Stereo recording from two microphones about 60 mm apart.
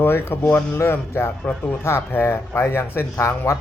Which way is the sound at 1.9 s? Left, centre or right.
Left.